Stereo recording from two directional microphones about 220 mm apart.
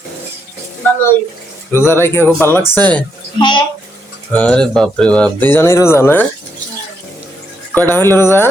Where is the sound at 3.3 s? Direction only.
20° left (ahead or behind).